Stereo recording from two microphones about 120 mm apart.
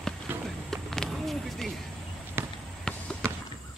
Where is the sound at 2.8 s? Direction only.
5° left (ahead or behind).